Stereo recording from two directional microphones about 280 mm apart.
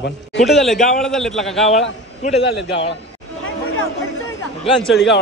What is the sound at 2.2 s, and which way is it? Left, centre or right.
Speech, left.